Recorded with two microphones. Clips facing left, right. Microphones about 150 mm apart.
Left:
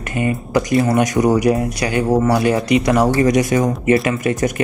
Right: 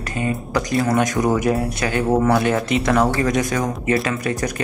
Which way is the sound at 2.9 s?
15° left (ahead or behind).